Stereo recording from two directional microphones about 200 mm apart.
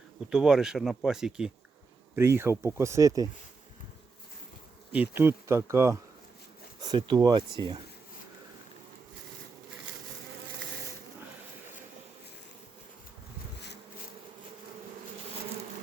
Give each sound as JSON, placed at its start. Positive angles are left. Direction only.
{"t": 0.3, "sound": "speech", "side_deg": -5}
{"t": 4.9, "sound": "speech", "side_deg": -10}